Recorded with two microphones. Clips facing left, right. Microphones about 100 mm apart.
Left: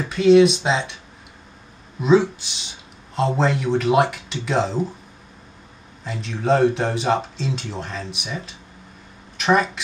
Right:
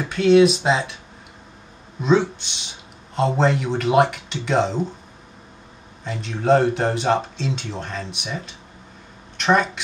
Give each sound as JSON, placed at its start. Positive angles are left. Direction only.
{"t": 0.0, "sound": "speech", "side_deg": 0}
{"t": 2.0, "sound": "speech", "side_deg": 5}
{"t": 6.0, "sound": "speech", "side_deg": 0}